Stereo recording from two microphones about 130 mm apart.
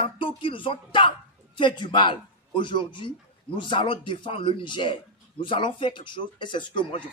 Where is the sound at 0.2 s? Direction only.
40° left (ahead or behind).